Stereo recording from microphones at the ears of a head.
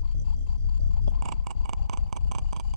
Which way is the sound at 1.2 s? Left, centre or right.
Right.